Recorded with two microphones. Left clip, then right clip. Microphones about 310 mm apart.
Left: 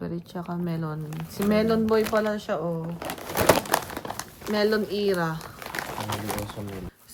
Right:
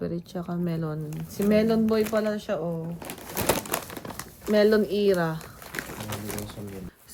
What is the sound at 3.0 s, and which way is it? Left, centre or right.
Crumpling, left.